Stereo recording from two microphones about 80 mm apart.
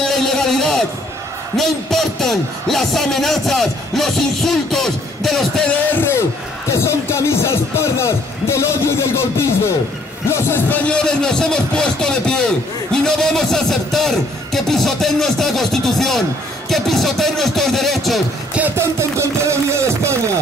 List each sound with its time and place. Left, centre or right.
0.0 s a sound: centre
1.6 s speech: centre
5.7 s speech: left
10.8 s speech: centre
18.8 s speech: right